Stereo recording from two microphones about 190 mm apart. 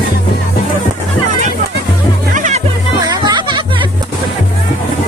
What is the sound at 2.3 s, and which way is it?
Music, 40° right (ahead or behind).